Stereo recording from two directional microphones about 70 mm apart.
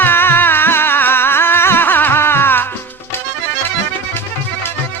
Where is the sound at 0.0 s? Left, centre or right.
Left.